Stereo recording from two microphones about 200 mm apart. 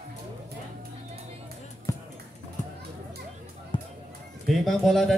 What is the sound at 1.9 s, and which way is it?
Basketball bounce, 15° left (ahead or behind).